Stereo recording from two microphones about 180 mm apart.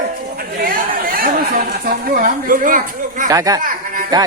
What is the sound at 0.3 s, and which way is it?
Chatter, 55° right (ahead or behind).